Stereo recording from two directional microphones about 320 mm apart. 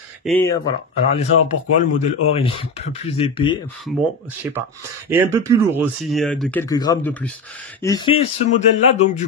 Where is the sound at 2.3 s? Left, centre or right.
Centre.